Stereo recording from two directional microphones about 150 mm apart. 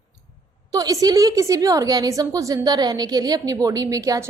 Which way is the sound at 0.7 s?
25° right (ahead or behind).